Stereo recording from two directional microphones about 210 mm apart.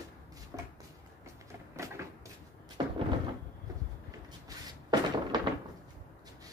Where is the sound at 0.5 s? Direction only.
15° right (ahead or behind).